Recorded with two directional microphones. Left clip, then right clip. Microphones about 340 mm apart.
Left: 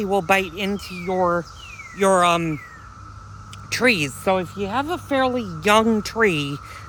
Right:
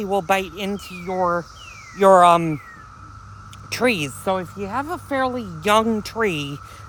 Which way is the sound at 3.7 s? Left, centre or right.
Centre.